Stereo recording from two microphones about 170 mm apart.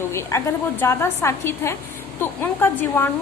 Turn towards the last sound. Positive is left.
turn(degrees=15)  # may be behind; listen again after turning